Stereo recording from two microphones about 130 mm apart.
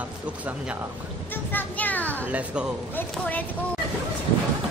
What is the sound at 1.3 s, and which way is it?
Speech, 15° left (ahead or behind).